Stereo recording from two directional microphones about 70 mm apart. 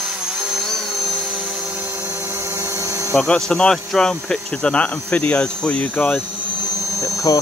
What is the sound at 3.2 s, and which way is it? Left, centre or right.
Speech, centre.